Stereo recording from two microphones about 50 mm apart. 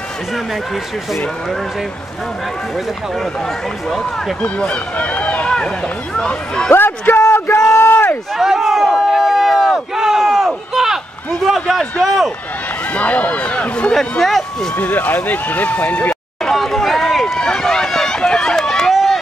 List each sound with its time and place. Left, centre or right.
4.4 s speech: left
6.7 s a sound: left
7.2 s a sound: left
8.4 s a sound: centre
12.9 s speech: left
14.2 s speech: centre
14.8 s speech: left
16.4 s run: centre
18.9 s run: centre